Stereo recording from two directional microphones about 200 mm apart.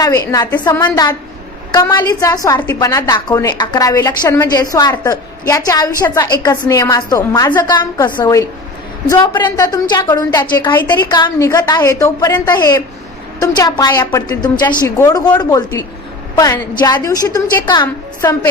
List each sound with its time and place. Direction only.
0.0 s a woman's voice: 15° left (ahead or behind)
10.8 s a woman's voice: 10° left (ahead or behind)